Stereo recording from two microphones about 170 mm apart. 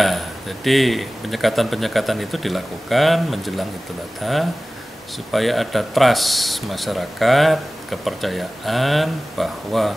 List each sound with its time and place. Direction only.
0.0 s speech: centre (ahead or behind)